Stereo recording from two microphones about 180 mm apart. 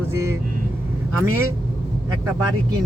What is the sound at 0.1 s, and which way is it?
Speech, 15° right (ahead or behind).